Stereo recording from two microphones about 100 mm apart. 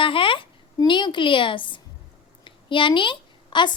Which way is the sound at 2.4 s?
55° left (ahead or behind).